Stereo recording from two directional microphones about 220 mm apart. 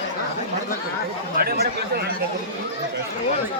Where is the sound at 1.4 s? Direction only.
45° right (ahead or behind).